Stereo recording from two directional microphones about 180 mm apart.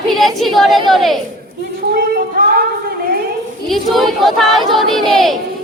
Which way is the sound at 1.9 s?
60° right (ahead or behind).